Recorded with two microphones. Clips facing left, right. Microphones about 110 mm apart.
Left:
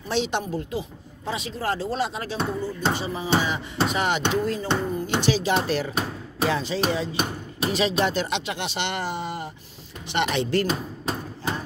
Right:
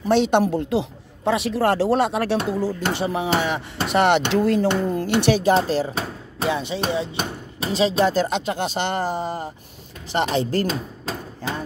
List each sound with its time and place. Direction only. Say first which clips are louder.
0.1 s music: right 8 dB; 55° right (ahead or behind)
5.5 s speech: right 5 dB; 35° right (ahead or behind)
6.4 s music: right 1 dB; 20° right (ahead or behind)
7.6 s speech: right 4 dB; 30° right (ahead or behind)